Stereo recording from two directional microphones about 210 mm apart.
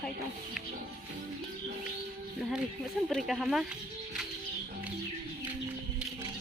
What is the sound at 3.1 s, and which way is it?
Speech, centre (ahead or behind).